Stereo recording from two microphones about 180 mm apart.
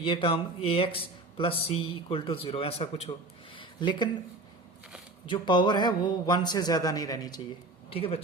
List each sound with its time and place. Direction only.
0.0 s speech: 30° left (ahead or behind)
3.5 s a sound: 25° left (ahead or behind)
5.2 s a man's voice: 25° left (ahead or behind)